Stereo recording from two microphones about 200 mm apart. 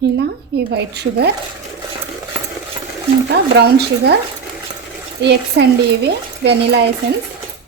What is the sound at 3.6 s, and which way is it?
Speech, 55° right (ahead or behind).